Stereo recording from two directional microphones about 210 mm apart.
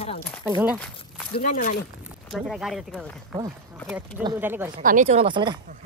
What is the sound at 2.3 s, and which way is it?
Speech, centre (ahead or behind).